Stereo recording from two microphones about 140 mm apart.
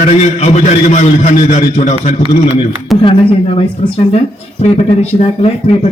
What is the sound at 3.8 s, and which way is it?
A man's voice, 45° left (ahead or behind).